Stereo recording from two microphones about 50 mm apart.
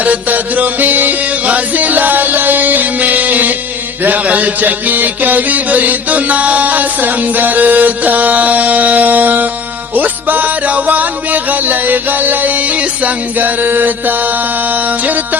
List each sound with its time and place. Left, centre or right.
0.0 s music: right